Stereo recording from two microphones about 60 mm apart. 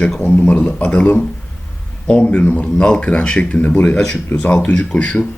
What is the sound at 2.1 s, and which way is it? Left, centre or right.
Speech, left.